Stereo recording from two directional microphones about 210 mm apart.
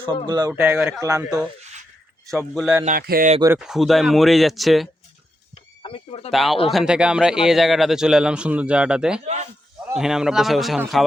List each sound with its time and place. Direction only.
0.3 s speech: 20° right (ahead or behind)
0.5 s speech: 10° right (ahead or behind)
2.6 s speech: 5° right (ahead or behind)
2.8 s speech: 40° right (ahead or behind)
3.6 s speech: centre (ahead or behind)
5.8 s speech: 25° left (ahead or behind)
6.3 s speech: centre (ahead or behind)
9.2 s speech: 35° right (ahead or behind)
9.9 s speech: centre (ahead or behind)